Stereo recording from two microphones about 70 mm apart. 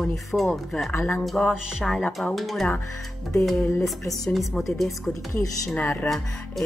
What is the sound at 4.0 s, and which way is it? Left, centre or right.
Speech, left.